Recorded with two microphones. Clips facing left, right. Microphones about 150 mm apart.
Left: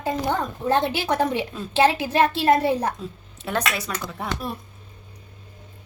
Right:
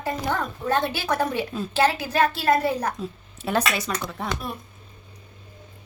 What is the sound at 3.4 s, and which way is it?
Speech, 5° right (ahead or behind).